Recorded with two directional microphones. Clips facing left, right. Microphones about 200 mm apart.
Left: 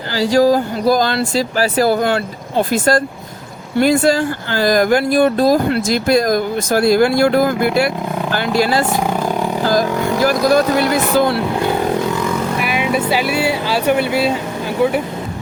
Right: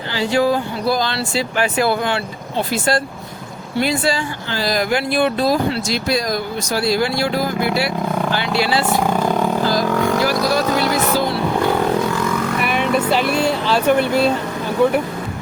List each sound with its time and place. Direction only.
0.2 s speech: 40° left (ahead or behind)
9.0 s vehicle: 10° left (ahead or behind)
10.2 s vehicle: 50° left (ahead or behind)
12.5 s speech: 5° left (ahead or behind)